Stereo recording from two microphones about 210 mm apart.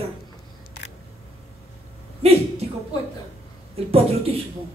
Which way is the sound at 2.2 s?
30° right (ahead or behind).